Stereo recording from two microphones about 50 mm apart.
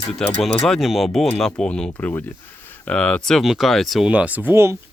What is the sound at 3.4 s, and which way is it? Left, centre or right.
Speech, centre.